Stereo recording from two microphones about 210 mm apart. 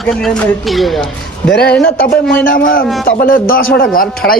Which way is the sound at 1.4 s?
50° left (ahead or behind).